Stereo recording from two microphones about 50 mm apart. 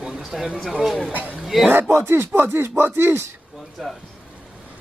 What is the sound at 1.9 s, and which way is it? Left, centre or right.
Speech, right.